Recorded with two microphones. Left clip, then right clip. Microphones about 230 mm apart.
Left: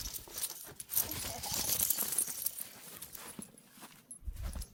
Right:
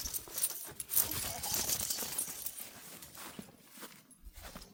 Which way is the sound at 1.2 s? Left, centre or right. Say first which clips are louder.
Right 1 dB; centre.